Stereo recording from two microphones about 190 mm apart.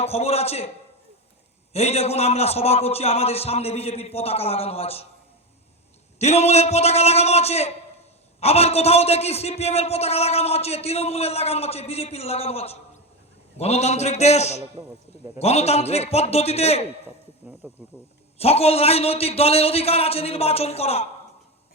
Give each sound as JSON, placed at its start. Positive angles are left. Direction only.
{"t": 0.0, "sound": "a man's voice", "side_deg": 35}
{"t": 1.7, "sound": "a man's voice", "side_deg": 35}
{"t": 6.1, "sound": "a man's voice", "side_deg": 35}
{"t": 17.6, "sound": "speech", "side_deg": -10}
{"t": 18.3, "sound": "a man's voice", "side_deg": 35}